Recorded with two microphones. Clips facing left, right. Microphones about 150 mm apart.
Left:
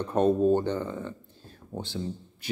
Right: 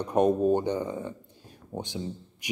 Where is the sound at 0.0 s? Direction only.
15° right (ahead or behind).